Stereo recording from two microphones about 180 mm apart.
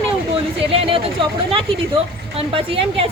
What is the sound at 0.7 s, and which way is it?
A woman's voice, 30° right (ahead or behind).